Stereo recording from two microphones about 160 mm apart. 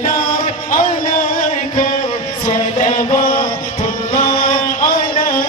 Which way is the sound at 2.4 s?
50° left (ahead or behind).